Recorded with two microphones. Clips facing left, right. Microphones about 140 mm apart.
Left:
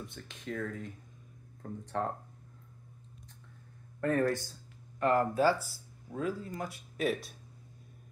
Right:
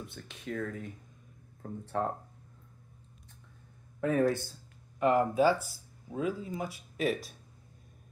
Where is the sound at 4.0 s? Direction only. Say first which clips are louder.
Right 2 dB; 5° right (ahead or behind).